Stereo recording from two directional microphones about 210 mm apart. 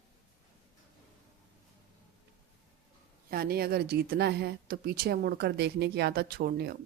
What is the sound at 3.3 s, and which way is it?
A woman's voice, 45° right (ahead or behind).